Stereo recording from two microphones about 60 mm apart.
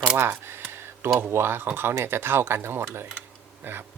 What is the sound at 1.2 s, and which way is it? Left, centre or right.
Speech, right.